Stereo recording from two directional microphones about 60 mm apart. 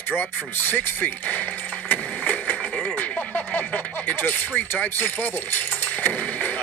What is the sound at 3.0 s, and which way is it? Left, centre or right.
Speech, left.